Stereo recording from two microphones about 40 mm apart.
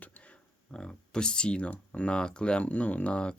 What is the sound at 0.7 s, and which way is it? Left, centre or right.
Speech, left.